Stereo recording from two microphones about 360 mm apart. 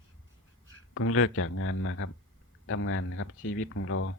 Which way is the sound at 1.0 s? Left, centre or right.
Left.